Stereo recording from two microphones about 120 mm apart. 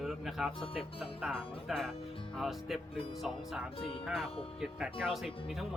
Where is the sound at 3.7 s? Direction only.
50° left (ahead or behind).